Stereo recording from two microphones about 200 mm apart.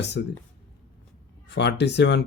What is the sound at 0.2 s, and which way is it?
Speech, 50° left (ahead or behind).